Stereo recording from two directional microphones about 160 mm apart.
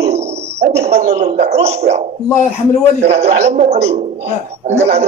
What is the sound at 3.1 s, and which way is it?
A man's voice, 40° right (ahead or behind).